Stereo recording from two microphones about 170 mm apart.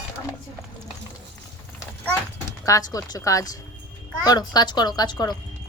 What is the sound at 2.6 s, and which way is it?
A woman's voice, 20° left (ahead or behind).